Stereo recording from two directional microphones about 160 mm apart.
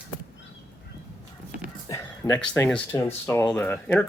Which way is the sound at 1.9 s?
20° left (ahead or behind).